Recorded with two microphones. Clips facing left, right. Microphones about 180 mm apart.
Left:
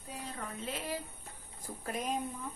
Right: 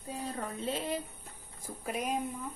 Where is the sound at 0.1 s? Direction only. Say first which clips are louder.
Right 5 dB; 30° right (ahead or behind).